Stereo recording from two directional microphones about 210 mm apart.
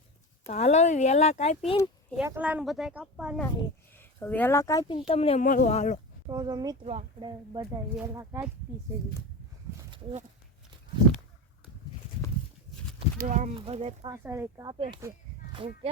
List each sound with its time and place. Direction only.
0.4 s speech: 35° left (ahead or behind)
2.2 s speech: 10° right (ahead or behind)
3.9 s speech: 10° left (ahead or behind); by 6.0 s 35° left (ahead or behind)
6.2 s speech: 20° right (ahead or behind)
9.9 s speech: 30° right (ahead or behind)
13.1 s speech: 35° right (ahead or behind)
14.1 s speech: 10° right (ahead or behind)